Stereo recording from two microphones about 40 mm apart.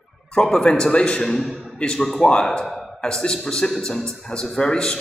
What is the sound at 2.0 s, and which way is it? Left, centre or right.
Speech, centre.